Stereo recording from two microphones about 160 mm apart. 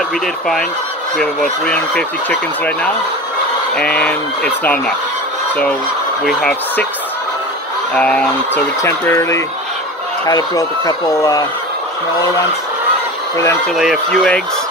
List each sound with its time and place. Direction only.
1.1 s speech: 5° left (ahead or behind)
6.2 s speech: 5° left (ahead or behind)
7.9 s speech: 5° left (ahead or behind)
13.7 s speech: centre (ahead or behind)